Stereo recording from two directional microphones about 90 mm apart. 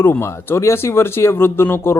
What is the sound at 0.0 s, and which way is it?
A man's voice, 25° left (ahead or behind).